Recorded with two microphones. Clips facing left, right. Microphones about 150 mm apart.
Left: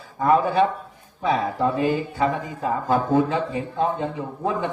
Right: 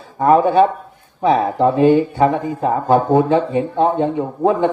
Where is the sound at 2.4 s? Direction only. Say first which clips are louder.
Right 7 dB; 30° right (ahead or behind).